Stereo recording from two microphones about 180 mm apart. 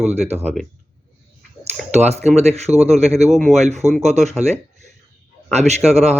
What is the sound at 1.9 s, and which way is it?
Speech, 35° right (ahead or behind).